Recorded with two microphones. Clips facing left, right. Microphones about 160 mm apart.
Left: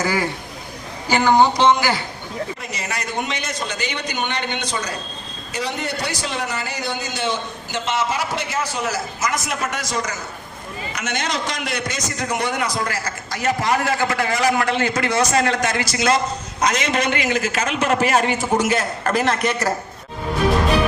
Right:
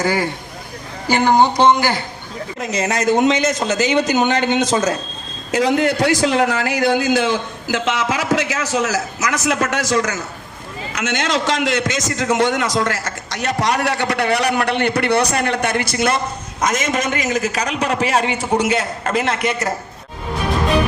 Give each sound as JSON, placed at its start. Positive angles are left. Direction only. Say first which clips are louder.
{"t": 1.2, "sound": "a sound", "louder": "right 2 dB", "side_deg": -35}
{"t": 2.6, "sound": "a man's voice", "louder": "right 9 dB", "side_deg": -90}
{"t": 10.9, "sound": "a man's voice", "louder": "right 5 dB", "side_deg": -90}